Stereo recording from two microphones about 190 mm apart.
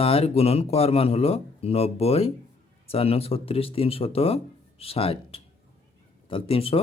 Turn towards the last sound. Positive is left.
turn(degrees=30)  # may be behind; listen again after turning